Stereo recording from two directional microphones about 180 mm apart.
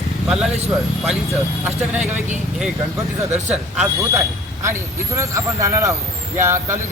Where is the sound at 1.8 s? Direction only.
5° right (ahead or behind).